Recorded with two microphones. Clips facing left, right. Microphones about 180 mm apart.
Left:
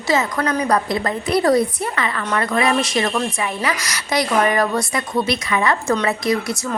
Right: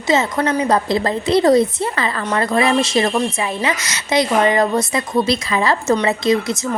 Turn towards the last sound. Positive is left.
turn(degrees=-20)  # may be behind; listen again after turning